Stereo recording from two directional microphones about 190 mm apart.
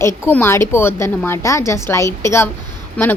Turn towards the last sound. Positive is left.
turn(degrees=5)  # may be behind; listen again after turning